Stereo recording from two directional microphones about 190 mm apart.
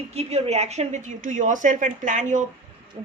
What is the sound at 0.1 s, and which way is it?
Speech, 35° right (ahead or behind).